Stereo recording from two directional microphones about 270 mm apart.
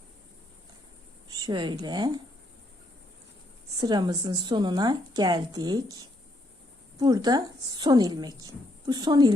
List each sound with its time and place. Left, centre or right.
1.3 s a woman's voice: centre
3.8 s a woman's voice: centre
7.0 s a woman's voice: centre